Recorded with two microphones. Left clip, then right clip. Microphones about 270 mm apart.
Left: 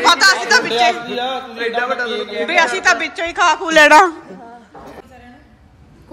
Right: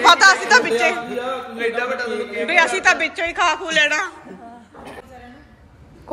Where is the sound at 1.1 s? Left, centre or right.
Left.